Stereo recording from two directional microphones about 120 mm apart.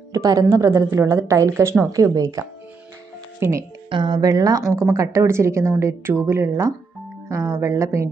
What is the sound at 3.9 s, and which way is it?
A woman's voice, 40° right (ahead or behind).